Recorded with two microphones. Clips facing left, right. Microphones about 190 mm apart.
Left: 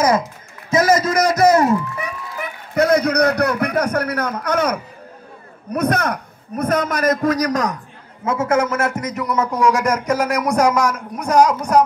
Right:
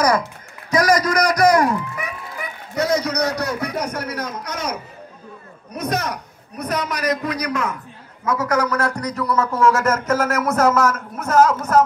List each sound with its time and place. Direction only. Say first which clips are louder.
0.7 s a man's voice: left 2 dB; 25° left (ahead or behind)
2.3 s a man's voice: left 6 dB; 55° left (ahead or behind)
8.3 s a man's voice: left 2 dB; 25° left (ahead or behind)